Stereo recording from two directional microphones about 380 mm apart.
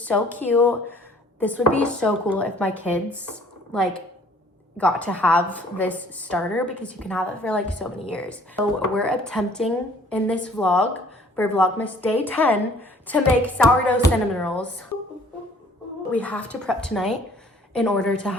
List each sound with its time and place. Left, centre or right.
0.0 s a woman's voice: centre
16.1 s a woman's voice: centre